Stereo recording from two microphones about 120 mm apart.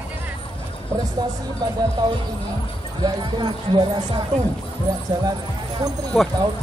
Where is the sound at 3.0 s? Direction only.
40° right (ahead or behind).